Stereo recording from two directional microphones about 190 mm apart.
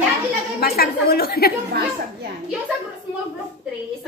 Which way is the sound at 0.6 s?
55° left (ahead or behind).